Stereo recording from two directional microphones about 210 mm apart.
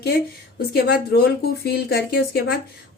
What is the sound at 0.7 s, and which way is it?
Speech, 50° left (ahead or behind).